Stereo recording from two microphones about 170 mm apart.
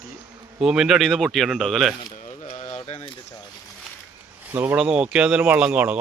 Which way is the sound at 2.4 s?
40° left (ahead or behind).